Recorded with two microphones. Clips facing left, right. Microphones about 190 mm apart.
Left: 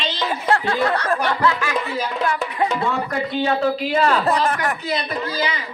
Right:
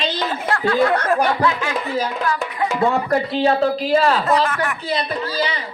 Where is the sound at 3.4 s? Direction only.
35° right (ahead or behind).